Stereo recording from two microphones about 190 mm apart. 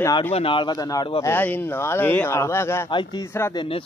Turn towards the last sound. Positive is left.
turn(degrees=15)  # may be behind; listen again after turning